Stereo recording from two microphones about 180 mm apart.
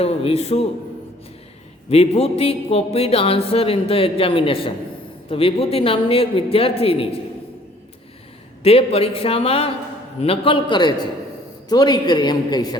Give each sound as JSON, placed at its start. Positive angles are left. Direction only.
{"t": 0.0, "sound": "speech", "side_deg": 35}
{"t": 1.9, "sound": "speech", "side_deg": 35}
{"t": 8.6, "sound": "a man's voice", "side_deg": 35}